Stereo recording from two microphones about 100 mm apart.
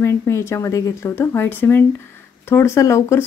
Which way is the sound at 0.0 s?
30° left (ahead or behind).